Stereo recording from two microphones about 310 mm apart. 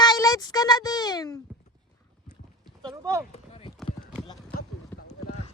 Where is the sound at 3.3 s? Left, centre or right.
Centre.